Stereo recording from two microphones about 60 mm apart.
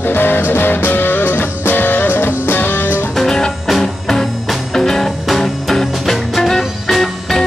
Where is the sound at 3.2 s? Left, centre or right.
Centre.